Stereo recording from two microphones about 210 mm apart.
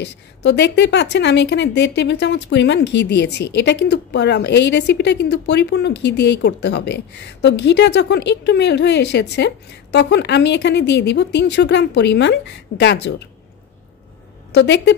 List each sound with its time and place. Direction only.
0.0 s speech: 55° left (ahead or behind)
14.5 s a woman's voice: 55° left (ahead or behind)